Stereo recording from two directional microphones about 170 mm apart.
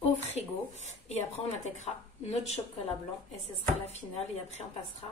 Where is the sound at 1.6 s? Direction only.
40° left (ahead or behind).